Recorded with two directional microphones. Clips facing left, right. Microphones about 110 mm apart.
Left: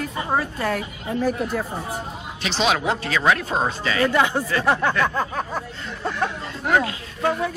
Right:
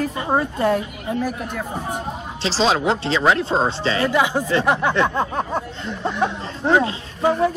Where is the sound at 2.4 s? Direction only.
30° right (ahead or behind).